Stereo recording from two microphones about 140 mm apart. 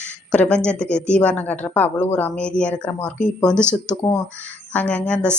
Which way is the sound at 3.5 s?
15° right (ahead or behind).